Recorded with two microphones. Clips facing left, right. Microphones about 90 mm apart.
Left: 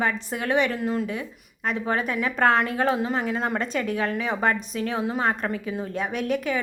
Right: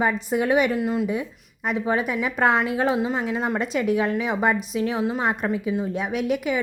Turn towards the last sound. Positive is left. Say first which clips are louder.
# right 2 dB
turn(degrees=-10)  # may be behind; listen again after turning